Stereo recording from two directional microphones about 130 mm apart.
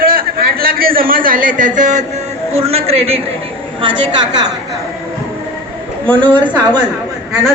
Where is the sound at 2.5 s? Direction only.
50° right (ahead or behind).